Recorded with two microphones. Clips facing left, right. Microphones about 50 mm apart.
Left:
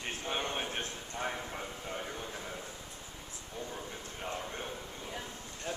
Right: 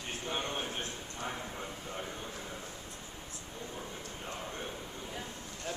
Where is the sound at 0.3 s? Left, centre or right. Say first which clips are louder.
Left 1 dB; centre.